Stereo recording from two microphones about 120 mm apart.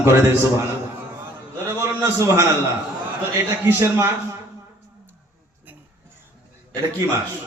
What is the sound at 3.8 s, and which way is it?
Speech, 20° right (ahead or behind).